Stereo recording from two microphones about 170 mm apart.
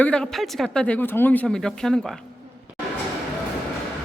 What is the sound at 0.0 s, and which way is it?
Speech, 5° left (ahead or behind).